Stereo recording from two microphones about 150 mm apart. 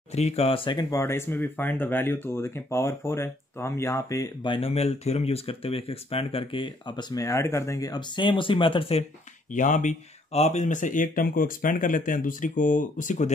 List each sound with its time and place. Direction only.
0.1 s speech: 45° left (ahead or behind); by 4.5 s 20° left (ahead or behind)
4.5 s speech: 40° left (ahead or behind)
9.5 s speech: 60° left (ahead or behind)